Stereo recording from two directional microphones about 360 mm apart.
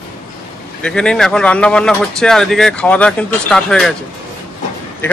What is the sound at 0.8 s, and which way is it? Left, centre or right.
Speech, centre.